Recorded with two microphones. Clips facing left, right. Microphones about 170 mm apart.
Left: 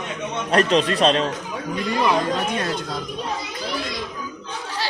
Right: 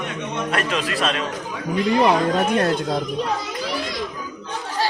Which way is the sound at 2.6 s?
55° right (ahead or behind).